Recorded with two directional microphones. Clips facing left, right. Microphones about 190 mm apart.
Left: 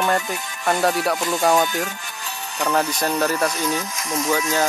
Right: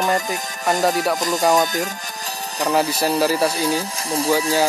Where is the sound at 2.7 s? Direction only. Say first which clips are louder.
Right 2 dB; 10° right (ahead or behind).